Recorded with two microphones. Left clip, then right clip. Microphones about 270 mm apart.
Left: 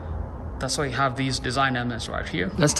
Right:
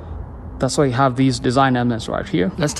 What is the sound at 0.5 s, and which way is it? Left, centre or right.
Speech, centre.